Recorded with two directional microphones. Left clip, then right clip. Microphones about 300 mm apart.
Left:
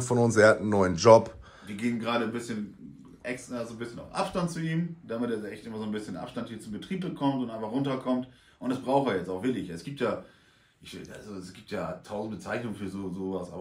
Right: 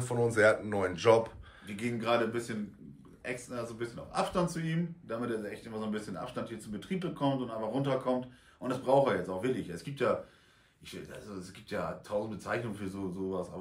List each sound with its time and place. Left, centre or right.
0.0 s speech: centre
1.8 s speech: centre